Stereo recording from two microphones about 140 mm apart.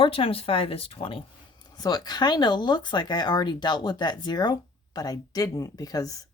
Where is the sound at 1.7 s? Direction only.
25° left (ahead or behind).